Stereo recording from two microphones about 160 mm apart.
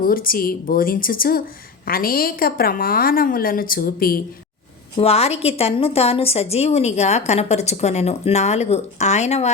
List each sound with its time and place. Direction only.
0.0 s a woman's voice: 65° left (ahead or behind)
4.9 s a woman's voice: 40° left (ahead or behind)